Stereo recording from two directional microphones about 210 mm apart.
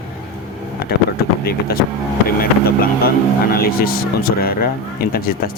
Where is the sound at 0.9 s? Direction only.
50° left (ahead or behind).